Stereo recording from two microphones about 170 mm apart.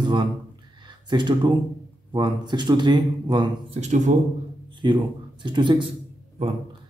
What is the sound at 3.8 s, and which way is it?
Speech, 45° right (ahead or behind).